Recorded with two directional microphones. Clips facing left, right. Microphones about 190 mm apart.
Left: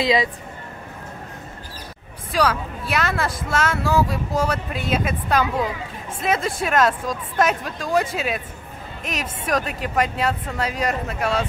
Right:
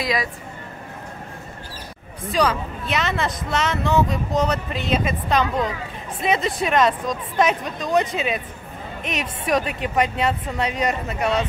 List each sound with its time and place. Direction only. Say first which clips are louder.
0.0 s speech: left 5 dB; 25° left (ahead or behind)
2.3 s speech: even; centre (ahead or behind)